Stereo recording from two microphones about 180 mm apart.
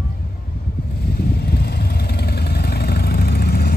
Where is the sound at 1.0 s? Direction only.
60° left (ahead or behind).